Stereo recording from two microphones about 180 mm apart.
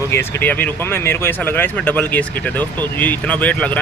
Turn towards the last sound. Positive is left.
turn(degrees=5)  # may be behind; listen again after turning